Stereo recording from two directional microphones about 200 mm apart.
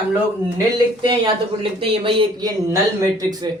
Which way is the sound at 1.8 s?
25° right (ahead or behind).